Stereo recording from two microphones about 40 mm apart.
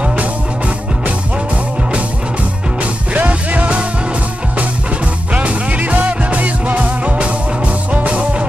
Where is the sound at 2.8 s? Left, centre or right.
Right.